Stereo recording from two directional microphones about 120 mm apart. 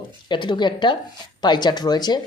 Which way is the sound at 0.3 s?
40° left (ahead or behind).